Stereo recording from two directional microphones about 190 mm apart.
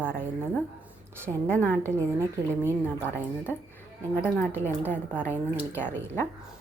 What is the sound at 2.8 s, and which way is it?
A woman's voice, 10° left (ahead or behind).